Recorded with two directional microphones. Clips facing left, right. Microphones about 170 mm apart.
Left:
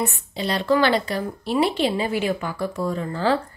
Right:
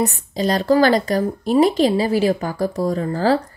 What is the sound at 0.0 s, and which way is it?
Speech, 40° right (ahead or behind).